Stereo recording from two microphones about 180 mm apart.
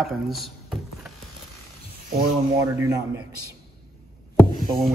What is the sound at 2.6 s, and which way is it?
Speech, 20° right (ahead or behind).